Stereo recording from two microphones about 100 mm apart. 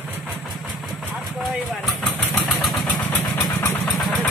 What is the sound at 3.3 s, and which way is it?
Vehicle, 30° left (ahead or behind).